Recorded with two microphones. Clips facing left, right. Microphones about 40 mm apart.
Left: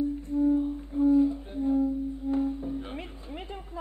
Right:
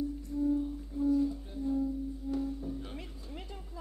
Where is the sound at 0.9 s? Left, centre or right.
Left.